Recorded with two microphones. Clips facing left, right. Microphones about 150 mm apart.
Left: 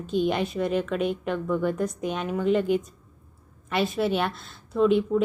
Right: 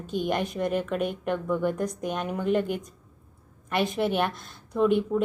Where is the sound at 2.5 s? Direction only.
50° right (ahead or behind).